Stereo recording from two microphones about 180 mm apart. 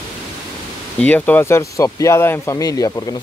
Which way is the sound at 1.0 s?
10° left (ahead or behind).